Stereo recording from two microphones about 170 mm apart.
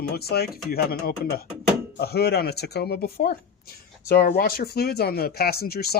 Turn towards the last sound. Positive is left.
turn(degrees=65)  # may be behind; listen again after turning